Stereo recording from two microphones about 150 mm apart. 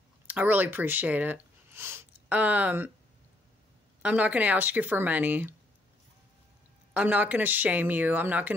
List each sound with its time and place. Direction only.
0.3 s speech: 10° right (ahead or behind)
4.0 s speech: 10° right (ahead or behind)
6.9 s speech: 10° right (ahead or behind)